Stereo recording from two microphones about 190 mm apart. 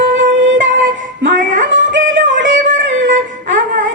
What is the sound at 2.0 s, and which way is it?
Music, 45° right (ahead or behind).